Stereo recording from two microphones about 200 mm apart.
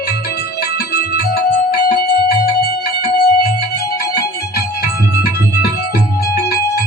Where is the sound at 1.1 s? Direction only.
50° left (ahead or behind).